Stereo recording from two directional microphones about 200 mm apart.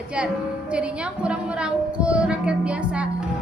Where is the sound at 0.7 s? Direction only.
5° right (ahead or behind).